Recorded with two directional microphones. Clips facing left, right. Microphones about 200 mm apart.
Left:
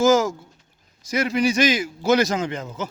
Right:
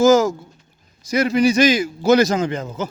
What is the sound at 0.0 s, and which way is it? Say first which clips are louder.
A man's voice: right 4 dB; 40° right (ahead or behind).